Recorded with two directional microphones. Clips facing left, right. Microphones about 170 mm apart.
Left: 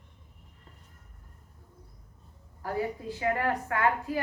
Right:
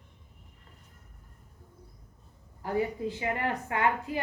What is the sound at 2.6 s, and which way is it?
A woman's voice, 20° right (ahead or behind).